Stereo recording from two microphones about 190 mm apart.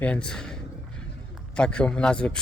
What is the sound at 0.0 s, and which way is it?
Speech, 5° left (ahead or behind).